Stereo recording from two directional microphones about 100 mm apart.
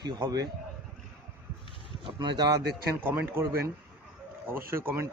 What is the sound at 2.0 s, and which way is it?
Speech, 50° right (ahead or behind).